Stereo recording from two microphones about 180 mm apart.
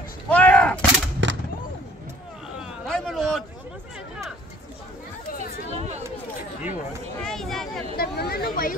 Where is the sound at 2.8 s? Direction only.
Centre (ahead or behind).